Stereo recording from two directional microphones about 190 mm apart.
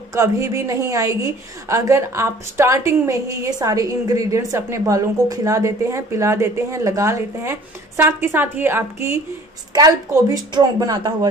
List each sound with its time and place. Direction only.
0.1 s a woman's voice: 15° right (ahead or behind)